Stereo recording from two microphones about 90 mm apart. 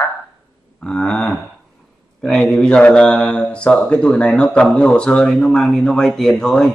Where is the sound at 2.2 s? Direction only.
5° left (ahead or behind).